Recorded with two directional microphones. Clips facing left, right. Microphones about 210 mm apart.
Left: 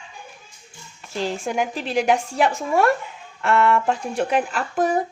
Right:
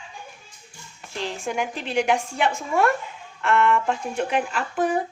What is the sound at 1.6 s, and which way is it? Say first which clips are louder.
Speech: left 1 dB; 35° left (ahead or behind).